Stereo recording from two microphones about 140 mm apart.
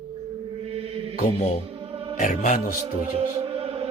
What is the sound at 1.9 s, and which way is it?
Music, 40° right (ahead or behind).